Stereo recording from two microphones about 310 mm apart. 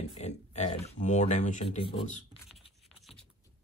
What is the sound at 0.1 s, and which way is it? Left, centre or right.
Speech, left.